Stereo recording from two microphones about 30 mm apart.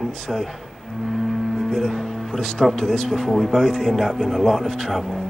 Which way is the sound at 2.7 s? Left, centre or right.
Centre.